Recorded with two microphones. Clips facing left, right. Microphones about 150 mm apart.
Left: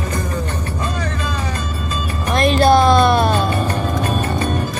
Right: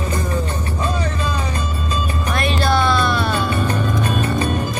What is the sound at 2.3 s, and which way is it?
Music, 35° left (ahead or behind).